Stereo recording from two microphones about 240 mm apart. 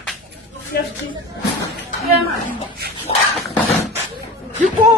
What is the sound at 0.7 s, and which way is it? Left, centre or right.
Speech, left.